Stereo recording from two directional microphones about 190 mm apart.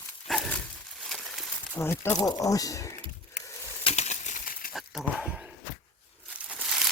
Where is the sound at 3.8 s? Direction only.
35° left (ahead or behind).